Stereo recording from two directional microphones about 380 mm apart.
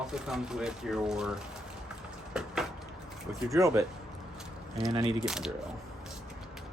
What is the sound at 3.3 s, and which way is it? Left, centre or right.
Speech, centre.